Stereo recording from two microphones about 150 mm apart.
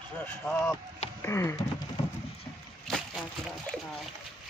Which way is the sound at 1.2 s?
20° left (ahead or behind).